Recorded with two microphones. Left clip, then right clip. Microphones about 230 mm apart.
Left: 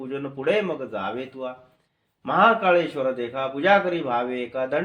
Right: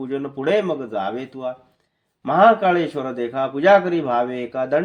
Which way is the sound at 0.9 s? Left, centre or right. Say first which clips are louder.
Right 4 dB; right.